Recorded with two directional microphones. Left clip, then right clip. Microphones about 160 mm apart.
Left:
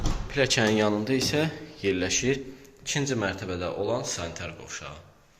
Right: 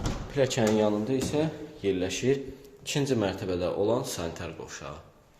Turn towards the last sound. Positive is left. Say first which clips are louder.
# left 1 dB
turn(degrees=-50)  # may be behind; listen again after turning